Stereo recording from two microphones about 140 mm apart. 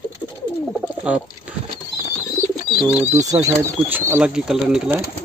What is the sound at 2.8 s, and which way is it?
Speech, 10° right (ahead or behind).